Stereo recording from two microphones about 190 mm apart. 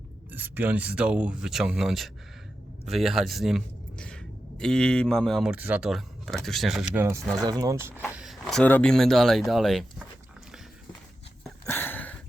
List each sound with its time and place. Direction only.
0.3 s speech: 10° right (ahead or behind)
7.4 s speech: 20° right (ahead or behind)
8.1 s speech: centre (ahead or behind)
11.6 s a sound: 10° left (ahead or behind)